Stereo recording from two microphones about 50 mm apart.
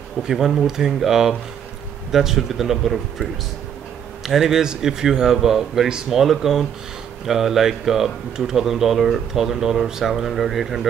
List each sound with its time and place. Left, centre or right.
0.2 s speech: centre
4.3 s speech: centre